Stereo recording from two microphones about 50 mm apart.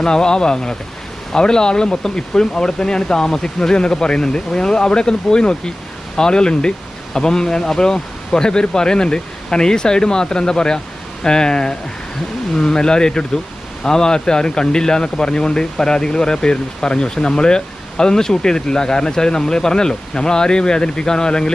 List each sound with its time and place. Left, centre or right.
0.0 s a man's voice: centre